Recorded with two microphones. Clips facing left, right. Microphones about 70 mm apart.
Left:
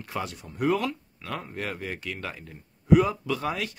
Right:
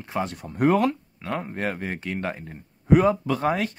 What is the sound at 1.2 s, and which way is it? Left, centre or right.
Speech, right.